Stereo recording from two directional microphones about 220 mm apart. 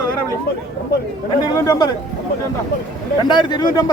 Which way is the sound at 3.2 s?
20° left (ahead or behind).